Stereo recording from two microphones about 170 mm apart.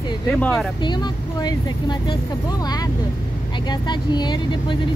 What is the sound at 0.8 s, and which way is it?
Speech, 25° left (ahead or behind).